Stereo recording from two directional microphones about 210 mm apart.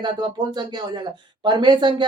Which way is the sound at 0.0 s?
20° right (ahead or behind).